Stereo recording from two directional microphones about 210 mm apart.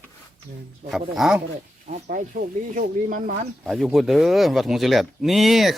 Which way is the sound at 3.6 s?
Centre (ahead or behind).